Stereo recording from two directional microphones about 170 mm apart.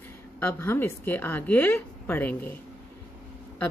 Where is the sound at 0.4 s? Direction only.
10° left (ahead or behind).